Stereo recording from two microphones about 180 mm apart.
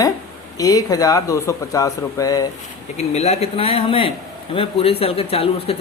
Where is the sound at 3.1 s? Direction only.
35° left (ahead or behind).